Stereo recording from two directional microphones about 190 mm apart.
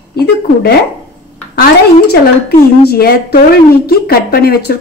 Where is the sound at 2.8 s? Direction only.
55° left (ahead or behind).